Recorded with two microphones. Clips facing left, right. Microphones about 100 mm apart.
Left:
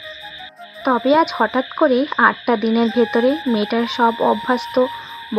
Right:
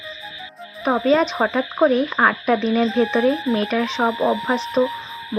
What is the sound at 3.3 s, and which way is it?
Speech, centre (ahead or behind).